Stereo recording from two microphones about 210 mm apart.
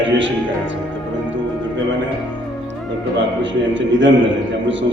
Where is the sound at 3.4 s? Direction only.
60° right (ahead or behind).